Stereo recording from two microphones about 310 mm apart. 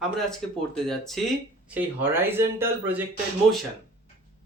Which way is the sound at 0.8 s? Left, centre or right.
Centre.